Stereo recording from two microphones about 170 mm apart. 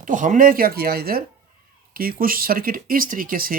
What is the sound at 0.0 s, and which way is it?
Speech, 50° right (ahead or behind).